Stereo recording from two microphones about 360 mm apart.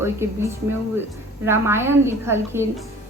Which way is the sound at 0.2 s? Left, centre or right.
Centre.